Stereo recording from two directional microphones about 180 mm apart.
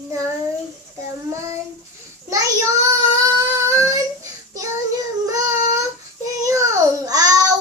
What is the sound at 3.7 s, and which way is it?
Child singing, 20° right (ahead or behind).